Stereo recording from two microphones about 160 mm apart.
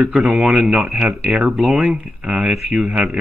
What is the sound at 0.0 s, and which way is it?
Speech, 5° right (ahead or behind).